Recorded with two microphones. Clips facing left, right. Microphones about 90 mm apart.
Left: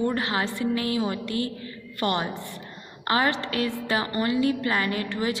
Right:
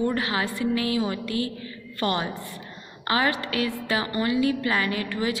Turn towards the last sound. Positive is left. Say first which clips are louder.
# even
turn(degrees=30)  # may be behind; listen again after turning